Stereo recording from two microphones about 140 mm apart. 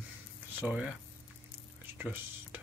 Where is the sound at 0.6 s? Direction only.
10° right (ahead or behind).